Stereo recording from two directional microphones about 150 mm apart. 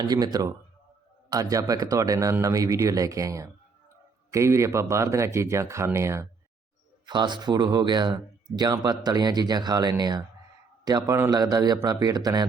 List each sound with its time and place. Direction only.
0.0 s speech: 25° right (ahead or behind)
7.0 s speech: 30° right (ahead or behind)